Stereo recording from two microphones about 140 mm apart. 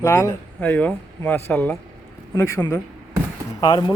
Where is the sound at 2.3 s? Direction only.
25° left (ahead or behind).